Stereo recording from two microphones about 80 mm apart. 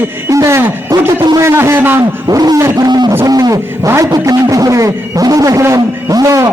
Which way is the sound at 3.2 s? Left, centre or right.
Right.